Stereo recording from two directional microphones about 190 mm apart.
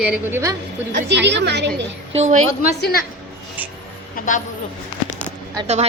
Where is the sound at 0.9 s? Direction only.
65° right (ahead or behind).